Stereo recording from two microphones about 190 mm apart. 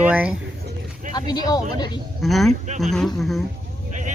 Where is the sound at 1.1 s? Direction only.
20° left (ahead or behind).